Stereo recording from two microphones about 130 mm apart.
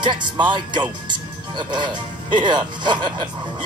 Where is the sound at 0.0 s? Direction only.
35° right (ahead or behind).